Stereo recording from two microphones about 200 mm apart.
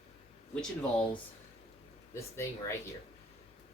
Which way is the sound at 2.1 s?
15° left (ahead or behind).